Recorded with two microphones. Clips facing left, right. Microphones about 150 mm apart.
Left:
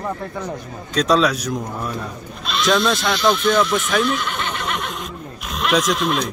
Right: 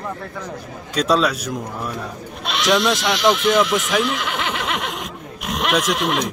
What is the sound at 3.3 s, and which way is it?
Speech, 90° right.